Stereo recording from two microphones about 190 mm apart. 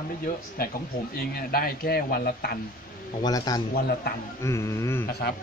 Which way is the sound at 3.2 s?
20° left (ahead or behind).